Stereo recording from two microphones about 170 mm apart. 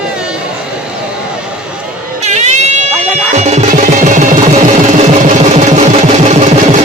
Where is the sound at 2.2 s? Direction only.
40° right (ahead or behind).